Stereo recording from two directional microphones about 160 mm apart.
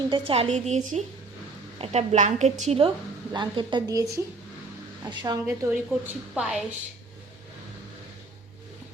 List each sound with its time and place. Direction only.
0.1 s a woman's voice: 35° right (ahead or behind)
0.5 s a woman's voice: 50° right (ahead or behind); by 5.4 s 25° right (ahead or behind)
5.5 s a woman's voice: 5° right (ahead or behind)